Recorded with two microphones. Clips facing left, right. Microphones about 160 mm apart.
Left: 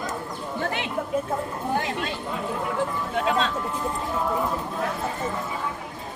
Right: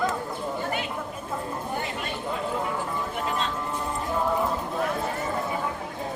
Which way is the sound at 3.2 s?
90° left.